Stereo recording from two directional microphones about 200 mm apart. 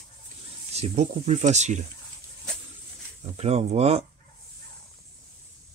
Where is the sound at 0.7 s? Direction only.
30° right (ahead or behind).